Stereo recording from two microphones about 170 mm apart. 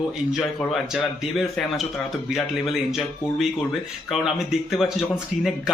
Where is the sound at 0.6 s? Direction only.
Centre (ahead or behind).